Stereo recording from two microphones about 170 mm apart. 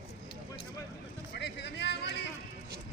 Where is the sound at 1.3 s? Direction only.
90° left.